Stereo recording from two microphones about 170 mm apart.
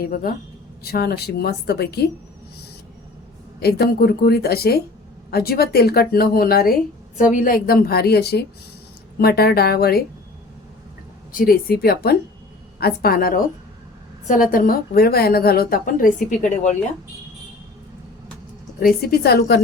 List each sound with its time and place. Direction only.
0.0 s a woman's voice: 60° left (ahead or behind); by 2.0 s 75° left (ahead or behind)
3.6 s a woman's voice: 65° left (ahead or behind)
11.3 s a woman's voice: 55° left (ahead or behind)
14.5 s a woman's voice: 55° left (ahead or behind)
18.8 s a woman's voice: 60° left (ahead or behind)